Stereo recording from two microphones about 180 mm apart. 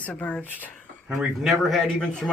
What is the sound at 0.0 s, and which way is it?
Speech, 10° left (ahead or behind).